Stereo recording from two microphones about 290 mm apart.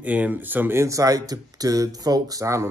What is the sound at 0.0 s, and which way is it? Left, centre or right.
Speech, centre.